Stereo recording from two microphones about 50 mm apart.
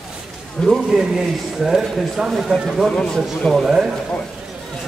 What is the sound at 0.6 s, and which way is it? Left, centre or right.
Speech, centre.